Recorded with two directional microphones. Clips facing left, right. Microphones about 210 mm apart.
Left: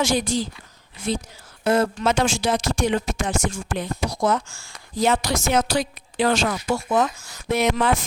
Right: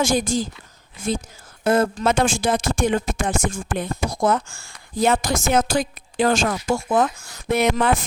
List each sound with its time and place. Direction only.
0.0 s speech: 45° right (ahead or behind)